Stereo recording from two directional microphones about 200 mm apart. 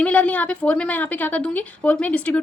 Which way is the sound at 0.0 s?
5° left (ahead or behind).